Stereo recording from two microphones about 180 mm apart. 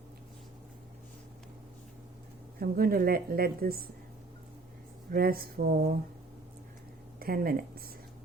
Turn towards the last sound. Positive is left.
turn(degrees=-55)  # may be behind; listen again after turning